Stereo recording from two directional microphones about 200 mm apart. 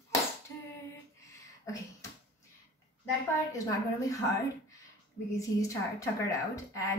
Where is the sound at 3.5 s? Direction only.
15° left (ahead or behind).